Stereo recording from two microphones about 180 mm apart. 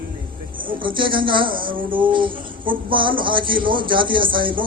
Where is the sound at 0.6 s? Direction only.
30° right (ahead or behind).